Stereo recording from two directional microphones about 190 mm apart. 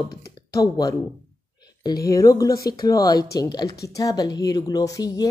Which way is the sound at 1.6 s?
20° left (ahead or behind).